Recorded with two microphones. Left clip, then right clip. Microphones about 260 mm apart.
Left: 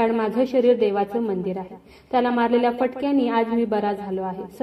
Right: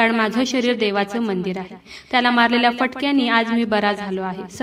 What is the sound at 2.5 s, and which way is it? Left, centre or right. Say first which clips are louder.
Speech: right 2 dB; right.